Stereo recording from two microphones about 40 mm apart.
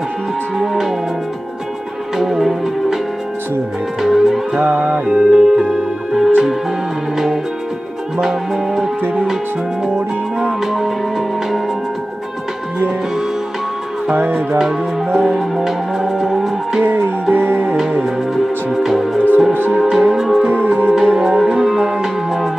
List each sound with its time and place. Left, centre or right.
0.6 s music: centre
2.1 s music: centre
4.0 s music: centre
4.6 s music: right
5.1 s music: centre
8.2 s music: centre
10.6 s music: centre
15.1 s music: centre
16.8 s music: right
18.0 s music: centre
20.4 s music: right
20.9 s music: centre